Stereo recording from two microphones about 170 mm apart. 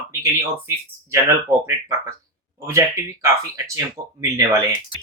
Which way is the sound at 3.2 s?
20° right (ahead or behind).